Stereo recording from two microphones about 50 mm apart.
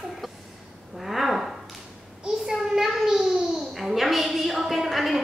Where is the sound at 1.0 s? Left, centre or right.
Centre.